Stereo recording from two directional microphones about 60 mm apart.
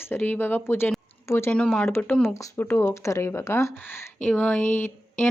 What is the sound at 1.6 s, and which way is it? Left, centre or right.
Speech, centre.